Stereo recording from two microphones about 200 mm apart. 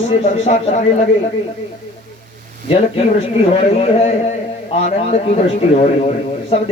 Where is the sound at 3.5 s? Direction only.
30° left (ahead or behind).